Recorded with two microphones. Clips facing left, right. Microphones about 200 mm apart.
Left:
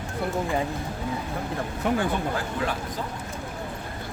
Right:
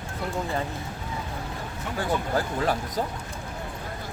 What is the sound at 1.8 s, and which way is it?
Speech, 65° left (ahead or behind).